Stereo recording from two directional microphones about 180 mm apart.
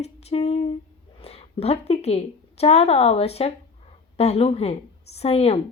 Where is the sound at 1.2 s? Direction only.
35° left (ahead or behind).